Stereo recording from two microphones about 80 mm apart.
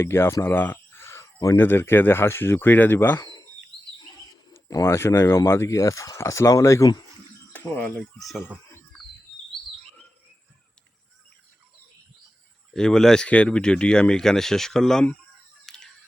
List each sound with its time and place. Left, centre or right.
0.0 s speech: left
4.7 s speech: left
7.5 s speech: centre
8.2 s speech: centre
12.7 s speech: centre
15.6 s a sound: centre